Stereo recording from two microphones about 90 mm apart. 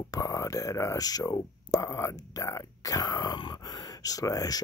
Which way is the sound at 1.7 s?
35° left (ahead or behind).